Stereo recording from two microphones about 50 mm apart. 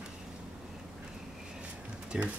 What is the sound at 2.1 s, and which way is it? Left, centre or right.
Speech, right.